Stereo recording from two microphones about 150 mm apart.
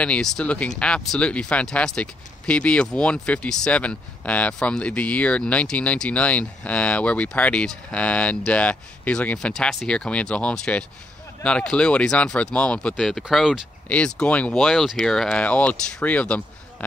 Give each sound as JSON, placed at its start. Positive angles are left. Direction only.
{"t": 0.0, "sound": "speech", "side_deg": 5}